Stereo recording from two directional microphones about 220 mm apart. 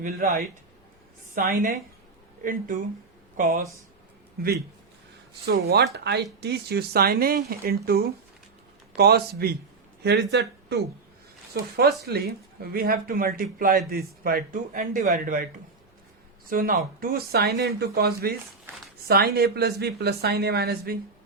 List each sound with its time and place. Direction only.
0.0 s a man's voice: 40° right (ahead or behind)
9.0 s a man's voice: 45° right (ahead or behind)
16.5 s speech: 40° right (ahead or behind)